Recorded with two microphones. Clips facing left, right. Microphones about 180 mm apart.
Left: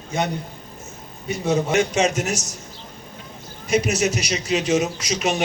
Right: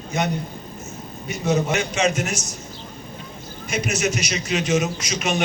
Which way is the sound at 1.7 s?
45° left (ahead or behind).